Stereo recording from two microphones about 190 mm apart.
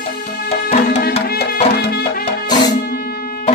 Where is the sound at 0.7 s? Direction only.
40° left (ahead or behind).